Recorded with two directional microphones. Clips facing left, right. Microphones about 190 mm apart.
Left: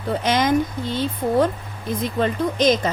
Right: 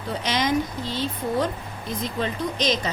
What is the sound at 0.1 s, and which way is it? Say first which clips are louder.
Speech: left 5 dB; 50° left (ahead or behind).